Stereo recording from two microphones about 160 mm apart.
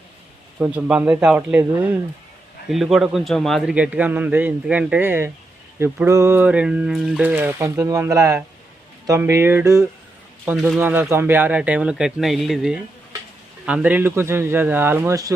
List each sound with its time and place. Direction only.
0.6 s a man's voice: 10° right (ahead or behind)